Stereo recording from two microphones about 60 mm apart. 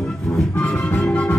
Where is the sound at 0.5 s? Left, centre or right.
Left.